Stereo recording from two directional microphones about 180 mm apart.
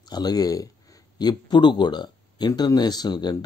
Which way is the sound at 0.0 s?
20° left (ahead or behind).